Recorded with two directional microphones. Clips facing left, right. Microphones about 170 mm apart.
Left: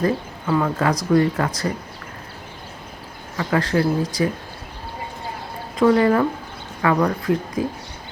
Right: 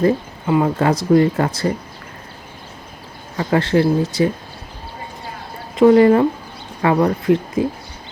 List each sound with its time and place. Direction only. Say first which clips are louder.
0.0 s speech: right 5 dB; 25° right (ahead or behind)
3.3 s speech: right 4 dB; 30° right (ahead or behind)
5.7 s speech: right 5 dB; 25° right (ahead or behind)